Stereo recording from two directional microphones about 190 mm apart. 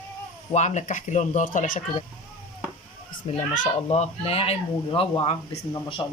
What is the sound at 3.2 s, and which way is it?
Speech, 35° left (ahead or behind).